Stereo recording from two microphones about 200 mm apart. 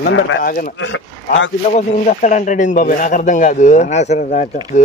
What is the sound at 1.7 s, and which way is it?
Speech, 35° left (ahead or behind).